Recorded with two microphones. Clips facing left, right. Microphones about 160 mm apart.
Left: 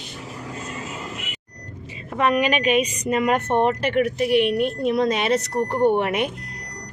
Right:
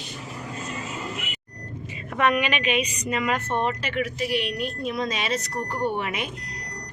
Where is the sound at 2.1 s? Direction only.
30° left (ahead or behind); by 5.4 s 60° left (ahead or behind).